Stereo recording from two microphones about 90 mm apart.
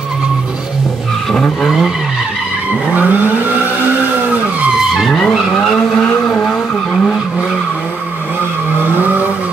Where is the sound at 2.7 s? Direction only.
15° right (ahead or behind).